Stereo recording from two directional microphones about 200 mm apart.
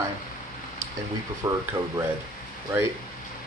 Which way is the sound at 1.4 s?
20° right (ahead or behind).